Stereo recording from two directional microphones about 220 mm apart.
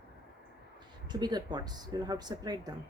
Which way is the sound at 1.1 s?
20° right (ahead or behind).